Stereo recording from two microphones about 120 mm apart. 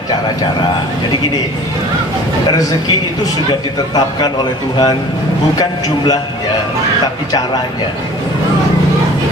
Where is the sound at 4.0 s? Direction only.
35° left (ahead or behind).